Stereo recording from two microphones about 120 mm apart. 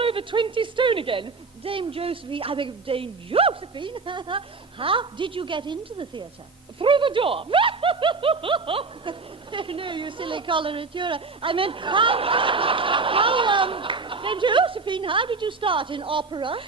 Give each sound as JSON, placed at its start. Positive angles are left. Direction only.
{"t": 0.0, "sound": "speech", "side_deg": -50}